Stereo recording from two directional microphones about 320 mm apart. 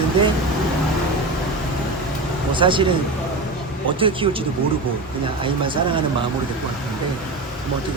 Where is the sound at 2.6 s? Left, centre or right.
Centre.